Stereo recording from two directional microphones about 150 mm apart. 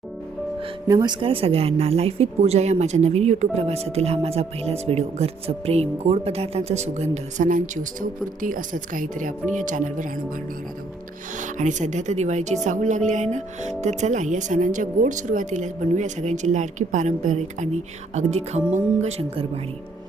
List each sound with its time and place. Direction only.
0.9 s speech: 25° right (ahead or behind); by 10.1 s 60° right (ahead or behind)
11.3 s speech: 55° right (ahead or behind)